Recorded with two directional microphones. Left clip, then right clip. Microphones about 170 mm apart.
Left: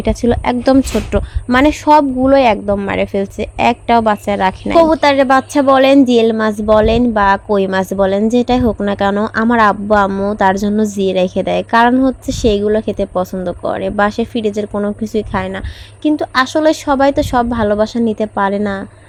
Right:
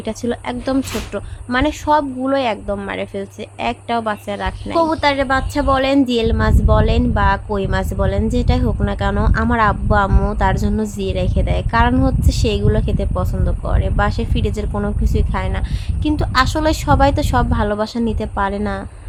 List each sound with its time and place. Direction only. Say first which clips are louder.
0.0 s a woman's voice: left 8 dB; 40° left (ahead or behind)
4.8 s a woman's voice: left 6 dB; 30° left (ahead or behind)
16.0 s a woman's voice: left 3 dB; 20° left (ahead or behind)